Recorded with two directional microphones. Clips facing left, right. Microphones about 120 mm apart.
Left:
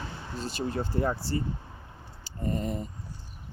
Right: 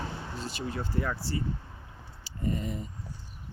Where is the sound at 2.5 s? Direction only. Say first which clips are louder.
Left 2 dB; 40° left (ahead or behind).